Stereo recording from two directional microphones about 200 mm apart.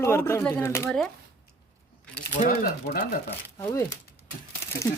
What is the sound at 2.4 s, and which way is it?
Speech, 45° left (ahead or behind).